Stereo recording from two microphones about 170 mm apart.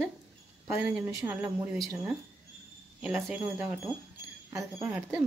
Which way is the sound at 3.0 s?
5° right (ahead or behind).